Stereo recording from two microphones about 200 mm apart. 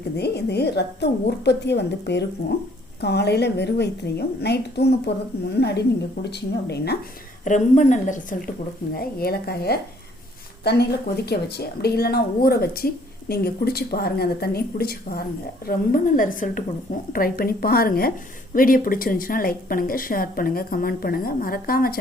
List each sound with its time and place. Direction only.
0.2 s a woman's voice: 55° left (ahead or behind)
7.4 s a woman's voice: 40° left (ahead or behind)